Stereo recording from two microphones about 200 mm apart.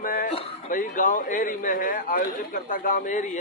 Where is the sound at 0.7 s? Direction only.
40° left (ahead or behind).